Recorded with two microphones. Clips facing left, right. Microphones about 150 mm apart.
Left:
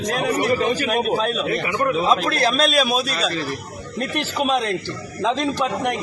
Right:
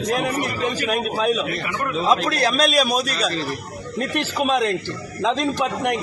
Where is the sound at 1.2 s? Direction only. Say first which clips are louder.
Even; 5° right (ahead or behind).